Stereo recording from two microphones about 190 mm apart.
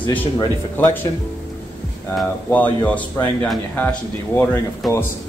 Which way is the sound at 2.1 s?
5° left (ahead or behind).